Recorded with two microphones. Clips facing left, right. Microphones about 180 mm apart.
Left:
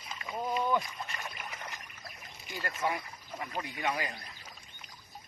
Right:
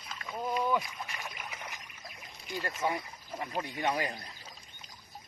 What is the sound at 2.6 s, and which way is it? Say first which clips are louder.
Speech: right 1 dB; 20° right (ahead or behind).